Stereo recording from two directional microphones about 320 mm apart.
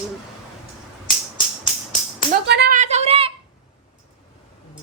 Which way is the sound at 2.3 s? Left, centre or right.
Right.